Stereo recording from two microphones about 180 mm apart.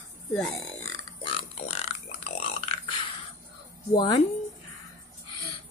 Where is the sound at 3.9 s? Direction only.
25° left (ahead or behind).